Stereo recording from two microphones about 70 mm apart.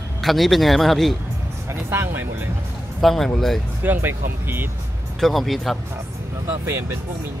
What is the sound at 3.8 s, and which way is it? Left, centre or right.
Speech, right.